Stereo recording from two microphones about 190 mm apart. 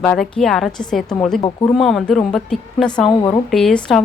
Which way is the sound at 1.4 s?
25° left (ahead or behind).